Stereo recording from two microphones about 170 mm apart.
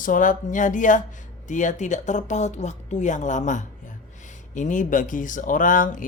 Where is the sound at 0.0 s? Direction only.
50° left (ahead or behind).